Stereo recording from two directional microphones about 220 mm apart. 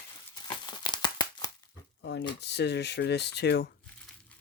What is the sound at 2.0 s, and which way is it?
Speech, 55° left (ahead or behind).